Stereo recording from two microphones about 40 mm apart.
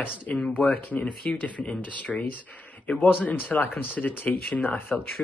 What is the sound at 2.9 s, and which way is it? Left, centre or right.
Speech, left.